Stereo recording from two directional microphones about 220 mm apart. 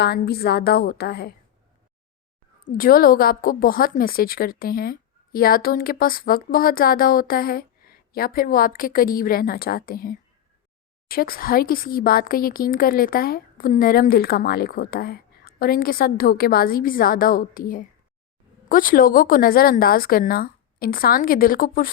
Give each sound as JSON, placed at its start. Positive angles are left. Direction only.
{"t": 0.0, "sound": "a woman's voice", "side_deg": 45}
{"t": 2.7, "sound": "a woman's voice", "side_deg": 40}